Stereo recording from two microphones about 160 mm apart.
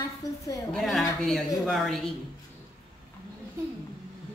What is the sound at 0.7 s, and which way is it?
Speech, centre (ahead or behind).